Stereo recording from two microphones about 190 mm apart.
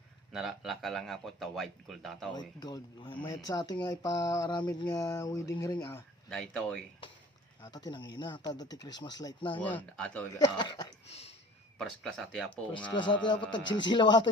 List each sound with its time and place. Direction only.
0.3 s a man's voice: centre (ahead or behind)
2.3 s speech: 20° left (ahead or behind)
6.5 s a man's voice: 5° left (ahead or behind)
7.6 s speech: 20° left (ahead or behind)
9.6 s speech: 10° left (ahead or behind)
10.3 s speech: 25° left (ahead or behind)
11.1 s speech: 35° left (ahead or behind)
11.8 s a man's voice: centre (ahead or behind)
12.9 s speech: 25° left (ahead or behind)